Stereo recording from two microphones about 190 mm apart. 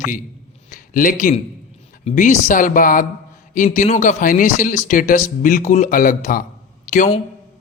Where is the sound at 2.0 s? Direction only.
40° left (ahead or behind).